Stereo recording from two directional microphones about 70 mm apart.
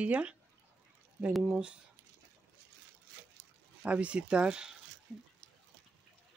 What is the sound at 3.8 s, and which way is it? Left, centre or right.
Speech, centre.